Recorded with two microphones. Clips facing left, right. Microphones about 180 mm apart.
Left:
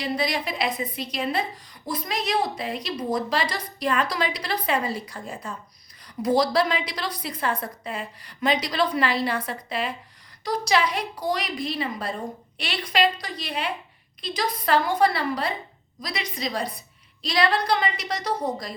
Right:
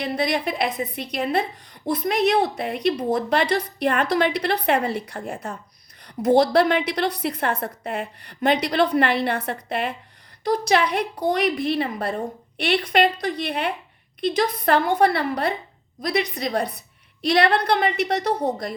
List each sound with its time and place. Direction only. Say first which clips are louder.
0.0 s a woman's voice: right 3 dB; 55° right (ahead or behind)